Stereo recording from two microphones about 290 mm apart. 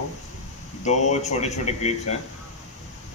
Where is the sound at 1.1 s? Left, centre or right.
Left.